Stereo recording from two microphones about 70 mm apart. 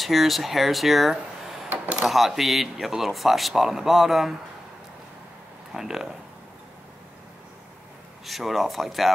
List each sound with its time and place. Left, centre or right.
0.0 s speech: centre
1.7 s a sound: centre
2.0 s speech: centre
5.7 s speech: centre
8.3 s speech: centre